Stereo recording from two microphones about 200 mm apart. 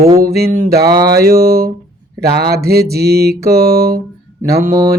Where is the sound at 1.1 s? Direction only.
50° right (ahead or behind).